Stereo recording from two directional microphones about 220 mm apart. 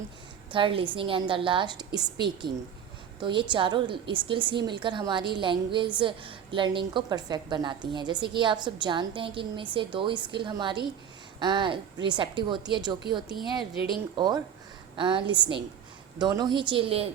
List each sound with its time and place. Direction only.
0.5 s a woman's voice: 25° right (ahead or behind)
14.9 s a woman's voice: 20° right (ahead or behind)